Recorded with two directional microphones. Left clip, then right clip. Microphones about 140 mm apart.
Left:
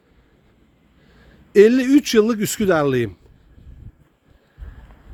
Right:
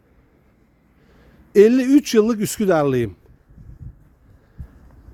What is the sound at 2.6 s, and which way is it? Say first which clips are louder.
Speech: even; 20° right (ahead or behind).